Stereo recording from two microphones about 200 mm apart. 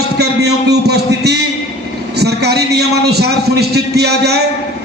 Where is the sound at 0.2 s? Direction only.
55° right (ahead or behind).